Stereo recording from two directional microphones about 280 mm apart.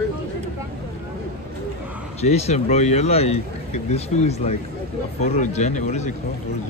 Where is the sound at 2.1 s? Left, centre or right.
Left.